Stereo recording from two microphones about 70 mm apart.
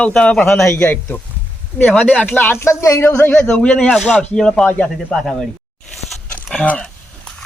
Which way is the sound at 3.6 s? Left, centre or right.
Centre.